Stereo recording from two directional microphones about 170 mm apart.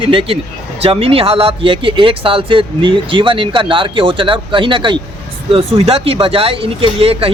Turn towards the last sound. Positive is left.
turn(degrees=-35)  # may be behind; listen again after turning